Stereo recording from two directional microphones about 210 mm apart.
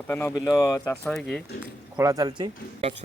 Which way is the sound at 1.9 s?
15° right (ahead or behind).